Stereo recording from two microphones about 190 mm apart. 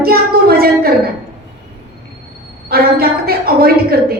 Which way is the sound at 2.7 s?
55° right (ahead or behind).